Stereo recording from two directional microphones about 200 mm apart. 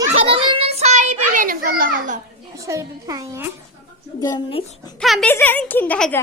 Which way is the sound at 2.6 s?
15° right (ahead or behind).